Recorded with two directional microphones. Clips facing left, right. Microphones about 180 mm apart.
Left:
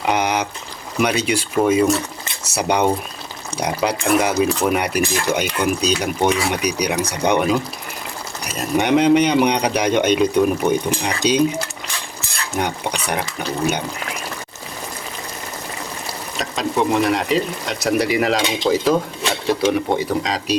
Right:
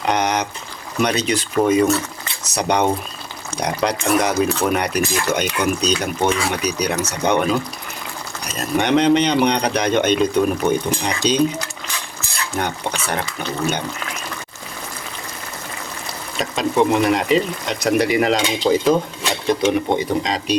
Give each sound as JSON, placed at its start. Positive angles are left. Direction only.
{"t": 0.0, "sound": "a sound", "side_deg": 10}
{"t": 0.9, "sound": "speech", "side_deg": 10}
{"t": 16.4, "sound": "speech", "side_deg": 0}